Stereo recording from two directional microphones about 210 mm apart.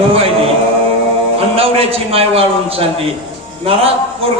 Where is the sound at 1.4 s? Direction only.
25° right (ahead or behind).